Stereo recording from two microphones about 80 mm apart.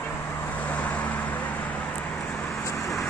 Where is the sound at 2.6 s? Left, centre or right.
Left.